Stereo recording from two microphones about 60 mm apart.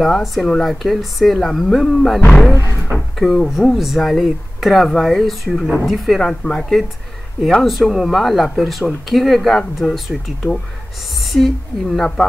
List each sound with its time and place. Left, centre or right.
0.0 s speech: centre
2.5 s a sound: left
3.2 s speech: centre
11.3 s a woman's voice: centre